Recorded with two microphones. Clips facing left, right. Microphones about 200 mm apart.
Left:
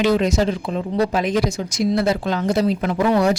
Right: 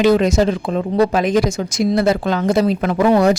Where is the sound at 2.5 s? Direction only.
90° right.